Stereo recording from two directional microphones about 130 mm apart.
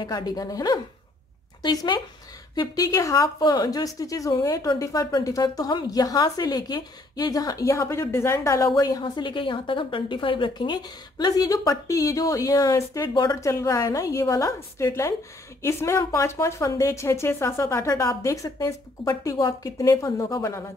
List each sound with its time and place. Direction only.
0.0 s a woman's voice: 30° left (ahead or behind)